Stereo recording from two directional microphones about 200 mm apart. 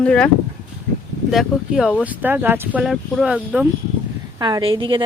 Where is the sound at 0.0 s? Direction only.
5° left (ahead or behind).